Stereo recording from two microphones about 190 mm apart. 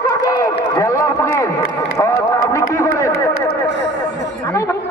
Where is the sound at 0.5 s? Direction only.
20° left (ahead or behind).